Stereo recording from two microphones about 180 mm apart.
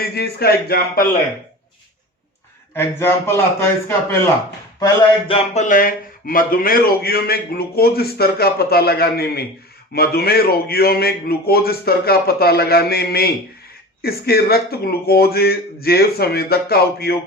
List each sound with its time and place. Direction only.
0.0 s a man's voice: 60° left (ahead or behind)
2.7 s a man's voice: 15° left (ahead or behind)
5.5 s a man's voice: 45° left (ahead or behind)